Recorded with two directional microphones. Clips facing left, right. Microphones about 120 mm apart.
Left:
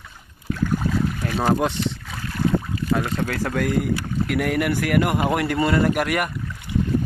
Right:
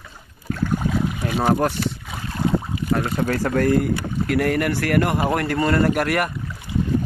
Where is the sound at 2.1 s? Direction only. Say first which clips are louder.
Even; 25° right (ahead or behind).